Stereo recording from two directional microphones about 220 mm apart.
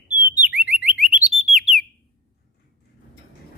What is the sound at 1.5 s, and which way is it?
Bird, centre (ahead or behind).